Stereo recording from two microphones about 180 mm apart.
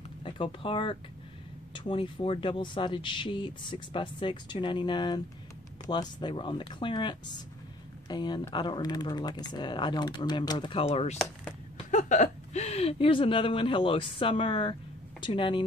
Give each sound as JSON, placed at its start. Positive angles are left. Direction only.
{"t": 0.2, "sound": "speech", "side_deg": 30}